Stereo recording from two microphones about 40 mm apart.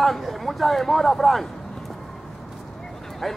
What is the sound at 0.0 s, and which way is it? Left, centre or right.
Speech, centre.